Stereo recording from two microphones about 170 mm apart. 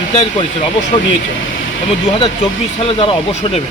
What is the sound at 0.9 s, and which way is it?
Speech, 35° left (ahead or behind).